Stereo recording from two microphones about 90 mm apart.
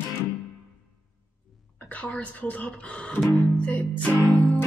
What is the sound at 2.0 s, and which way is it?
Speech, 15° left (ahead or behind).